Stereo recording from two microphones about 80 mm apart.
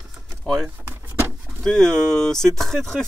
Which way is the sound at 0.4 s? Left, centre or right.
Centre.